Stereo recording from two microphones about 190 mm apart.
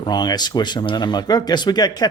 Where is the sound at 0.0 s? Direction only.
20° left (ahead or behind).